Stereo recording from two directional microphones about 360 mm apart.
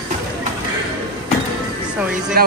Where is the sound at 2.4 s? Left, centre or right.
Right.